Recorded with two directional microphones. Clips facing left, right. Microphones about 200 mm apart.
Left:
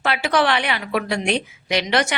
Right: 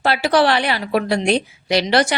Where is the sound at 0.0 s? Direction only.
35° right (ahead or behind).